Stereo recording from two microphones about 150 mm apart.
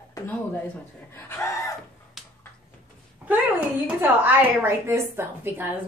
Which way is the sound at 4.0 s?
10° right (ahead or behind).